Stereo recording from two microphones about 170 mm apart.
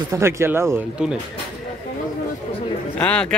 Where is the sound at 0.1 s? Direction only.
15° right (ahead or behind).